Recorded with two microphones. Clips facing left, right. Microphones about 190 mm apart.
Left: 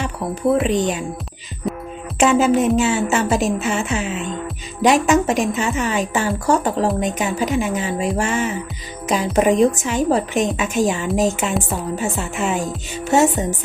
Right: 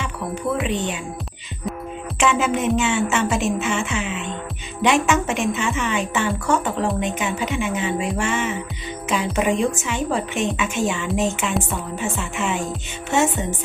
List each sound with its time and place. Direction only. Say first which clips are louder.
0.7 s a woman's voice: left 5 dB; 40° left (ahead or behind)
1.7 s music: left 4 dB; centre (ahead or behind)
2.1 s a woman's voice: left 6 dB; 40° left (ahead or behind)
13.1 s music: left 4 dB; 35° left (ahead or behind)